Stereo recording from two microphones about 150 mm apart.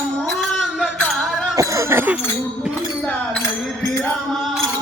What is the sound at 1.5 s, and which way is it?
Speech, 15° right (ahead or behind).